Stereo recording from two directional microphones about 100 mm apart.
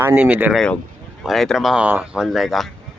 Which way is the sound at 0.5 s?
5° left (ahead or behind).